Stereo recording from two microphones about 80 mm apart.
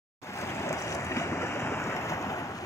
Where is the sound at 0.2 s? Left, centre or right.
Left.